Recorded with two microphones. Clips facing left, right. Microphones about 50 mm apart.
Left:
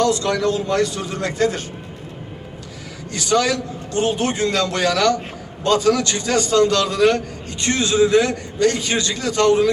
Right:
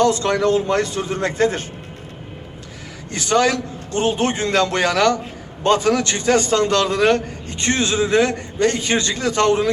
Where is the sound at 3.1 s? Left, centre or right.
Right.